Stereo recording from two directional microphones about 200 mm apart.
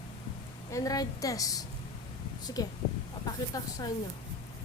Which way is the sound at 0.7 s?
20° left (ahead or behind).